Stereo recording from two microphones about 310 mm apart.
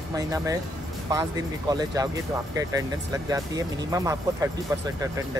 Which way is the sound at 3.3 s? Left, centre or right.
Centre.